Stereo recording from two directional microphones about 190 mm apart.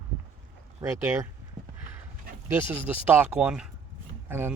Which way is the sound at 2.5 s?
10° right (ahead or behind).